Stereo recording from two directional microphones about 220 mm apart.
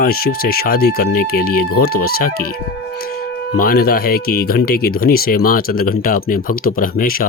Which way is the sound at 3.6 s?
45° left (ahead or behind).